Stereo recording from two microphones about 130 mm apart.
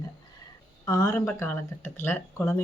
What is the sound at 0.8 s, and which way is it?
Speech, 25° left (ahead or behind).